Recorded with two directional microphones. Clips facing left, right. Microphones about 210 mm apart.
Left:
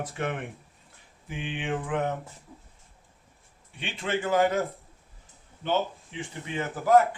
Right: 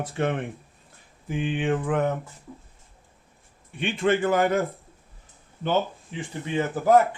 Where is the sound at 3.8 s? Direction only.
50° right (ahead or behind).